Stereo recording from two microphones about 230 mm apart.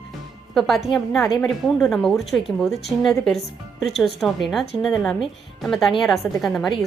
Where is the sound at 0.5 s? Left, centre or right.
Centre.